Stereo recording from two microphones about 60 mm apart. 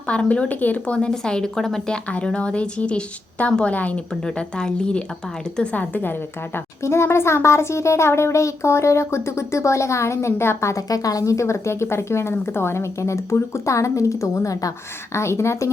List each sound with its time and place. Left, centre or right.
0.1 s speech: centre
0.9 s a woman's voice: centre
2.0 s speech: centre
4.1 s a woman's voice: centre
5.7 s speech: left
6.8 s speech: left
10.8 s speech: left
15.1 s speech: left